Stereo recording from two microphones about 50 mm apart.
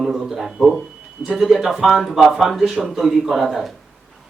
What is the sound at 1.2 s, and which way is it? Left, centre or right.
A man's voice, centre.